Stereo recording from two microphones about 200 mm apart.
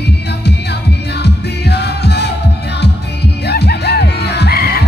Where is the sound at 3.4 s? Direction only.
55° left (ahead or behind).